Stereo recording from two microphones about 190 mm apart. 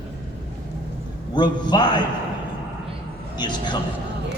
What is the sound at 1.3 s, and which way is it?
Speech, 25° left (ahead or behind).